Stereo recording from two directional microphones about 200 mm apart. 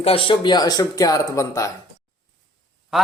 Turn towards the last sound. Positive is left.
turn(degrees=0)  # may be behind; listen again after turning